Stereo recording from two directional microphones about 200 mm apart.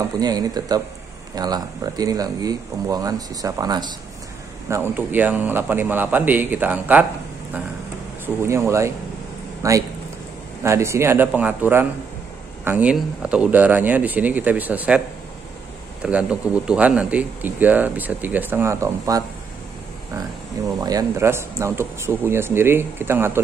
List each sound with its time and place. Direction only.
0.2 s speech: 20° right (ahead or behind)
8.5 s speech: 15° right (ahead or behind)
16.0 s speech: 5° right (ahead or behind)
20.8 s speech: 15° right (ahead or behind)